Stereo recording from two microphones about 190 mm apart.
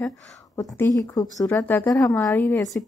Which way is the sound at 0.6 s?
20° left (ahead or behind).